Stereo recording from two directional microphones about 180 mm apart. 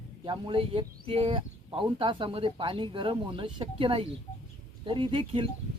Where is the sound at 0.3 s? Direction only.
30° right (ahead or behind).